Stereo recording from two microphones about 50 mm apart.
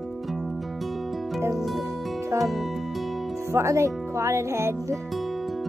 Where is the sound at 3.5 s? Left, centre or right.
Right.